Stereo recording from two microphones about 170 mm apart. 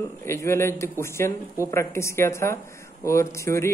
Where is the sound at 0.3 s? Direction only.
15° left (ahead or behind).